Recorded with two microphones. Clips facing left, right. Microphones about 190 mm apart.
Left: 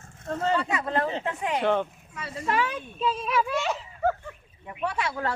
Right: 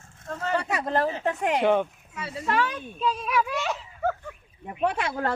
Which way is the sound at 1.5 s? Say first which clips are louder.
Right 1 dB; 10° right (ahead or behind).